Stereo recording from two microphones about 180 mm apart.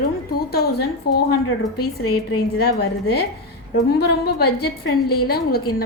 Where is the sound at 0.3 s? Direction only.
60° left (ahead or behind).